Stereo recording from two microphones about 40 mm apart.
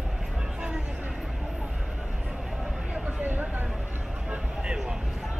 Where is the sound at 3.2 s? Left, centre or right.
Right.